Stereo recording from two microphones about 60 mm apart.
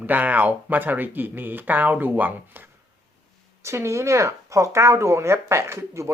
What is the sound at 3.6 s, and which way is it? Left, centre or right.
Speech, right.